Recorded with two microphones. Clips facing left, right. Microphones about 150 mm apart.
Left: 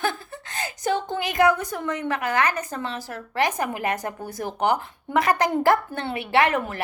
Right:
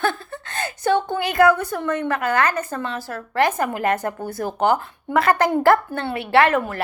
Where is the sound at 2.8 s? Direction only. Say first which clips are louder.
Right 3 dB; 60° right (ahead or behind).